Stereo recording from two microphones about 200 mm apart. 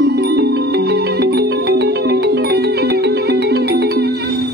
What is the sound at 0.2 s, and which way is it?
Music, 55° right (ahead or behind).